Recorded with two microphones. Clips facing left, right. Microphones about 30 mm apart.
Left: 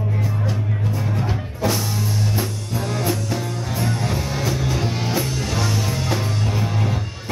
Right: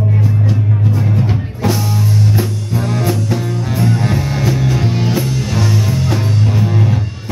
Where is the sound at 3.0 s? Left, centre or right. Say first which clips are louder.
Right 6 dB; centre.